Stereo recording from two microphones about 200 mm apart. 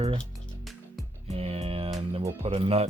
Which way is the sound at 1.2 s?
30° right (ahead or behind).